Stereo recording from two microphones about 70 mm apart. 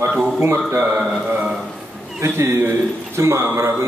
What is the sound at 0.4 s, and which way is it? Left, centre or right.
Speech, right.